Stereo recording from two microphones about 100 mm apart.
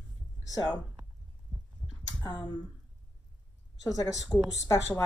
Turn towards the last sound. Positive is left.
turn(degrees=30)  # may be behind; listen again after turning